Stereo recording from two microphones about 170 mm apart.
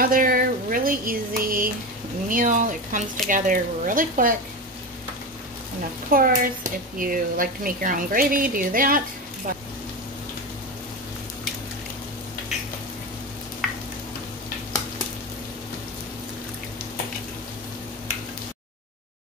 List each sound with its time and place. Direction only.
0.0 s a sound: 55° right (ahead or behind)
2.2 s speech: 50° right (ahead or behind)
6.1 s a woman's voice: 55° right (ahead or behind)
13.6 s stir: centre (ahead or behind)